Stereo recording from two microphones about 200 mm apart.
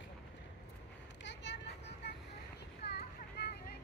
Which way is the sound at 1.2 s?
65° left (ahead or behind).